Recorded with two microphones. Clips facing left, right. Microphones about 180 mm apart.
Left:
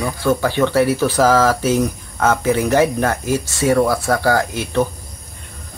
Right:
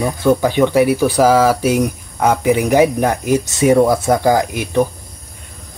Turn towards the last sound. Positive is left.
turn(degrees=-15)  # may be behind; listen again after turning